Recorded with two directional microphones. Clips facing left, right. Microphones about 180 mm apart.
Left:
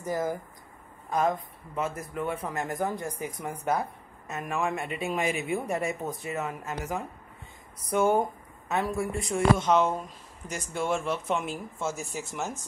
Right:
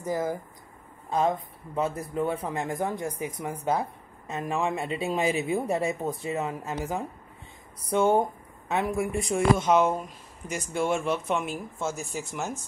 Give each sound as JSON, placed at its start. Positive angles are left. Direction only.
{"t": 0.0, "sound": "speech", "side_deg": -20}
{"t": 1.1, "sound": "a woman's voice", "side_deg": -30}